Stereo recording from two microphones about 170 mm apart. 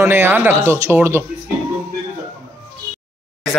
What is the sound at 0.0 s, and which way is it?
Speech, 15° right (ahead or behind).